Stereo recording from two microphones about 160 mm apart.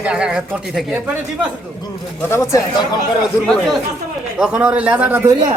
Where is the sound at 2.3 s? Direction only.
20° left (ahead or behind).